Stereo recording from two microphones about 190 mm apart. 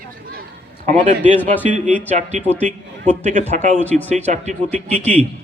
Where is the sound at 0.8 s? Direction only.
35° right (ahead or behind).